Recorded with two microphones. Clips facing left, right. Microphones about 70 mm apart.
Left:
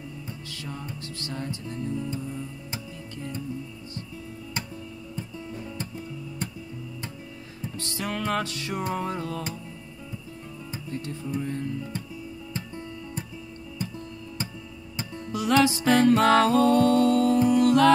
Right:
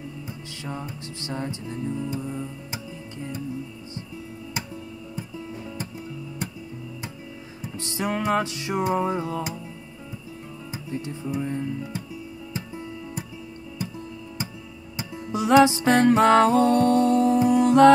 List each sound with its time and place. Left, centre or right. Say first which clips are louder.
0.7 s music: right 4 dB; right
1.9 s music: right 2 dB; centre
5.1 s music: right 1 dB; centre
7.6 s music: right 4 dB; centre
10.7 s music: right 2 dB; centre
15.0 s music: right 3 dB; centre